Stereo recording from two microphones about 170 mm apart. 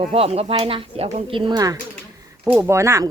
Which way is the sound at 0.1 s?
35° right (ahead or behind).